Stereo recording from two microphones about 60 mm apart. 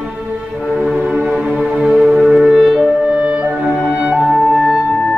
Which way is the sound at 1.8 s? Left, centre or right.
Centre.